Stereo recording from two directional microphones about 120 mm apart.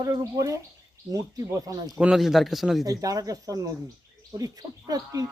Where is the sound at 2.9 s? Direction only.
30° right (ahead or behind).